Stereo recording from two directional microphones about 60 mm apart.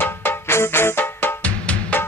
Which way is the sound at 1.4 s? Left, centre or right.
Left.